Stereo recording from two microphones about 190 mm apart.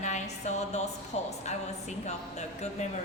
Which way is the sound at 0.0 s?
35° left (ahead or behind).